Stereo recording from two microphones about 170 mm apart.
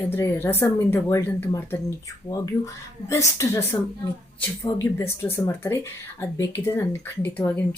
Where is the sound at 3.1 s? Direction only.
15° left (ahead or behind).